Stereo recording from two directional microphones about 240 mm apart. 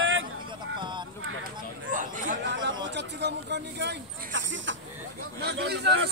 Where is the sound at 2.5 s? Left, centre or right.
Right.